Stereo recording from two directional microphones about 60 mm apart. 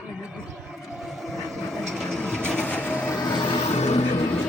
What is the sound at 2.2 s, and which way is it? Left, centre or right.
Vehicle, centre.